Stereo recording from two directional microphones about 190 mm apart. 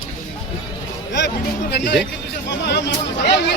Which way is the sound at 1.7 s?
65° left (ahead or behind).